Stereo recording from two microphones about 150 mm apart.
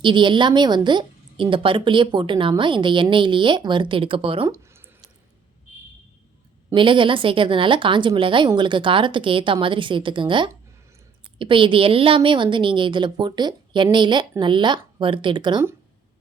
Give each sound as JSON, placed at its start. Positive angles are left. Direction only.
{"t": 0.0, "sound": "a woman's voice", "side_deg": -30}
{"t": 4.4, "sound": "a sound", "side_deg": -20}
{"t": 6.7, "sound": "a woman's voice", "side_deg": -35}